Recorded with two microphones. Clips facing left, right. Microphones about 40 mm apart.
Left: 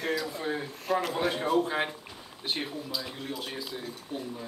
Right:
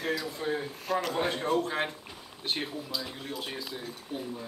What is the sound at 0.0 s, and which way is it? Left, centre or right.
Speech, centre.